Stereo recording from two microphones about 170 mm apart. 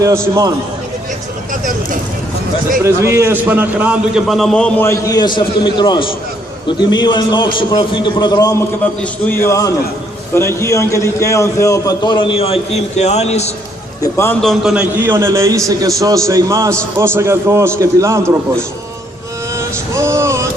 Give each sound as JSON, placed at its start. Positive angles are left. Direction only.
{"t": 0.0, "sound": "a man's voice", "side_deg": -20}
{"t": 2.8, "sound": "a man's voice", "side_deg": -15}
{"t": 14.0, "sound": "a man's voice", "side_deg": 15}
{"t": 14.4, "sound": "a man's voice", "side_deg": 0}
{"t": 19.5, "sound": "vehicle", "side_deg": -15}